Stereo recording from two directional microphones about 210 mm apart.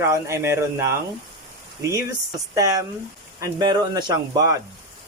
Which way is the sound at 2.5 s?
15° right (ahead or behind).